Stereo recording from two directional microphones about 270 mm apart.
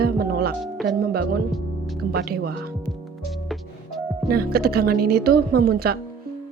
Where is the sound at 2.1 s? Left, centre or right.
Right.